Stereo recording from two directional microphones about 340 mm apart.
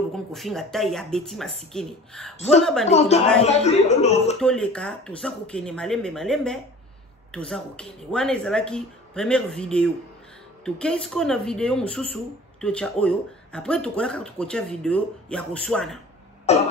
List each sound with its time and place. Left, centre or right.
0.1 s speech: centre
2.9 s speech: centre
4.4 s speech: centre
16.5 s speech: centre